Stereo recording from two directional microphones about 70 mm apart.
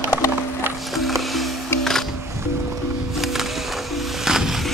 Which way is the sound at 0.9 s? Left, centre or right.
Centre.